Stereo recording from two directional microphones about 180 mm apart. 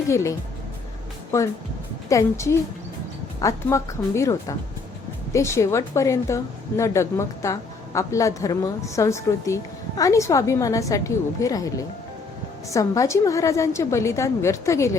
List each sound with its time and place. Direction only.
0.1 s a woman's voice: 15° left (ahead or behind)
2.0 s a woman's voice: 15° left (ahead or behind)